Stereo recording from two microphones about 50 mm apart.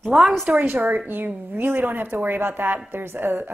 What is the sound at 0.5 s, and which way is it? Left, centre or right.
A woman's voice, right.